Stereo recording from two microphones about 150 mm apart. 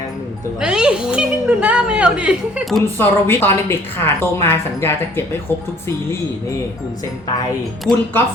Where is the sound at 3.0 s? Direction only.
15° left (ahead or behind).